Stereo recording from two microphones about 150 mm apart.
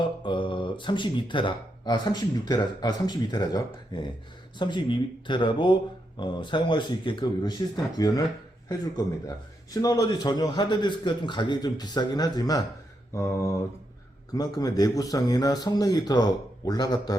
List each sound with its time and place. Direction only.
0.3 s a man's voice: 35° left (ahead or behind)